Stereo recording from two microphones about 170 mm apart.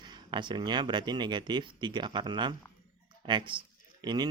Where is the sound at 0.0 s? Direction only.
25° right (ahead or behind).